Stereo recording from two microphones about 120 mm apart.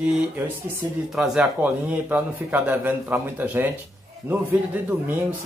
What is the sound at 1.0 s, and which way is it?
A man's voice, centre (ahead or behind).